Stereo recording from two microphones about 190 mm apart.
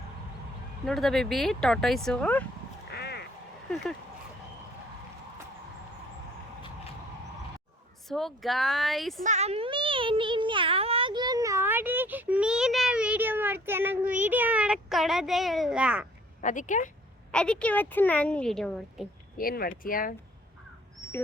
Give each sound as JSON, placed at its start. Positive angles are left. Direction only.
{"t": 0.9, "sound": "a woman's voice", "side_deg": 0}
{"t": 2.9, "sound": "quack", "side_deg": 60}
{"t": 8.0, "sound": "a woman's voice", "side_deg": 0}
{"t": 9.2, "sound": "a sound", "side_deg": -35}
{"t": 16.4, "sound": "speech", "side_deg": 40}
{"t": 17.3, "sound": "a woman's voice", "side_deg": 5}
{"t": 19.4, "sound": "speech", "side_deg": 50}